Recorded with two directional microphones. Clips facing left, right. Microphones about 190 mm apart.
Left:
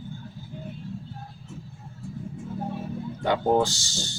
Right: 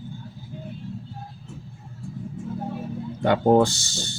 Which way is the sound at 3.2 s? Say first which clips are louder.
Right 5 dB; 55° right (ahead or behind).